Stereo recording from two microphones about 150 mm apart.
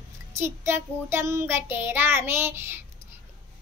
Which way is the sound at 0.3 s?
15° right (ahead or behind).